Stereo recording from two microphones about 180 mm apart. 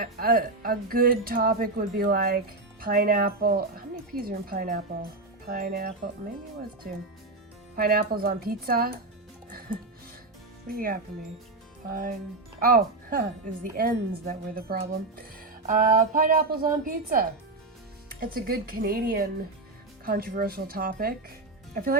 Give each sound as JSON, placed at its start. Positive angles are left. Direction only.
{"t": 0.0, "sound": "speech", "side_deg": -55}
{"t": 7.8, "sound": "speech", "side_deg": -55}
{"t": 10.8, "sound": "speech", "side_deg": -55}